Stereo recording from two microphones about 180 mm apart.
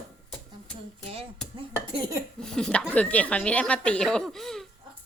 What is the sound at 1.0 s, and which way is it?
Speech, 35° right (ahead or behind).